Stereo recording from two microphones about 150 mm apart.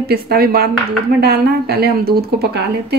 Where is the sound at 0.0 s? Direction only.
90° right.